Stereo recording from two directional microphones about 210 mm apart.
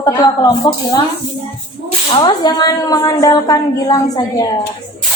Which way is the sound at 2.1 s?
20° left (ahead or behind).